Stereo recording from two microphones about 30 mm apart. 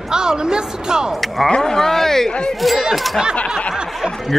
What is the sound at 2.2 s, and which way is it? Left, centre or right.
Speech, left.